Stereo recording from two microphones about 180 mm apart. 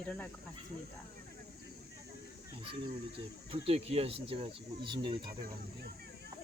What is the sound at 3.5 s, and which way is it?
Speech, 30° right (ahead or behind).